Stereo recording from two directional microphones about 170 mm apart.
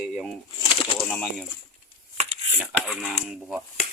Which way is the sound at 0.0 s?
Centre (ahead or behind).